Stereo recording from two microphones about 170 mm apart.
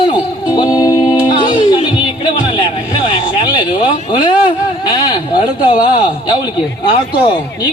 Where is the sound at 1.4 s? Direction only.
30° left (ahead or behind).